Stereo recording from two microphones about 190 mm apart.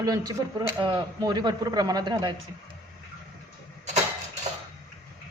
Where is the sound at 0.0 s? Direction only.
20° right (ahead or behind).